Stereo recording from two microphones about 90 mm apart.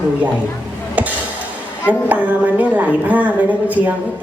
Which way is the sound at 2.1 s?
15° right (ahead or behind).